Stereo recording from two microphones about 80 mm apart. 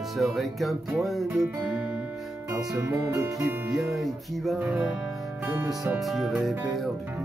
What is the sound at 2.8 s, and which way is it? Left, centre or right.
Speech, right.